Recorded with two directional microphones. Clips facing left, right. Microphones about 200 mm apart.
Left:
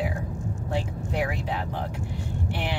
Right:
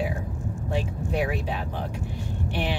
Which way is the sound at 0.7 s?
15° right (ahead or behind).